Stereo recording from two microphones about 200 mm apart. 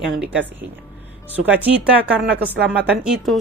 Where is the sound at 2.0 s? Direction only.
5° right (ahead or behind).